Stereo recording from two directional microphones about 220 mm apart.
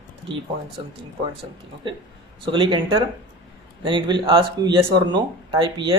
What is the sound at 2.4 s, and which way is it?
Speech, 20° right (ahead or behind).